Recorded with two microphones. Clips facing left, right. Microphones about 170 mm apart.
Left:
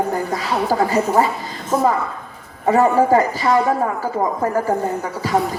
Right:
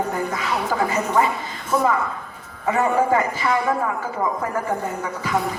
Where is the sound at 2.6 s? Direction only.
35° left (ahead or behind).